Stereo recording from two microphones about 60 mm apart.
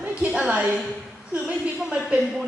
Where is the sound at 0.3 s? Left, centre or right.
Centre.